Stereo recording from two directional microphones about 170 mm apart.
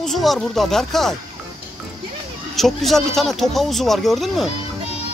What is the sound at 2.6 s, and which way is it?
Speech, centre (ahead or behind).